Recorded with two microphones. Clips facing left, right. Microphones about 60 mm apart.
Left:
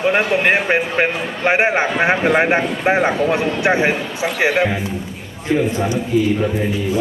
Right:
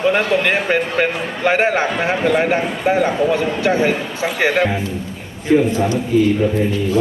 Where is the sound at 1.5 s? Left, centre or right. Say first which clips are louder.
Even; left.